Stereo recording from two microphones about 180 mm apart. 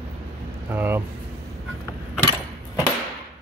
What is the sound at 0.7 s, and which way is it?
Speech, 10° right (ahead or behind).